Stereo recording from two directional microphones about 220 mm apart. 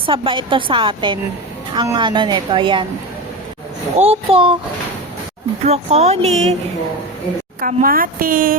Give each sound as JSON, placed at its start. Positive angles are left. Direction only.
{"t": 0.0, "sound": "a woman's voice", "side_deg": -25}
{"t": 3.9, "sound": "a woman's voice", "side_deg": -25}
{"t": 5.6, "sound": "a woman's voice", "side_deg": -30}
{"t": 7.6, "sound": "speech", "side_deg": -40}